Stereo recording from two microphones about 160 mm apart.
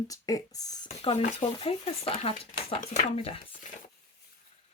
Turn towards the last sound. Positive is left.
turn(degrees=40)  # may be behind; listen again after turning